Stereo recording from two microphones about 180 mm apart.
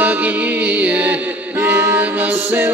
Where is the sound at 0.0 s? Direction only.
10° right (ahead or behind).